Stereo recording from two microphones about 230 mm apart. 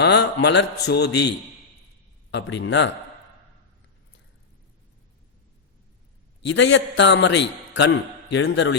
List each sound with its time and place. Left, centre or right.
0.0 s a man's voice: left
2.3 s a man's voice: left
6.5 s a man's voice: left